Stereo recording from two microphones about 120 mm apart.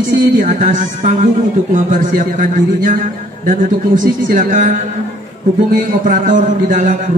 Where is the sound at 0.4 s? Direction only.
90° right.